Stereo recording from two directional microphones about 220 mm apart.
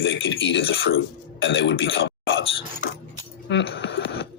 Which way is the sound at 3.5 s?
55° left (ahead or behind).